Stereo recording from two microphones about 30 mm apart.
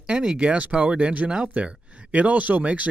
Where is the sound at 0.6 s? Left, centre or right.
Right.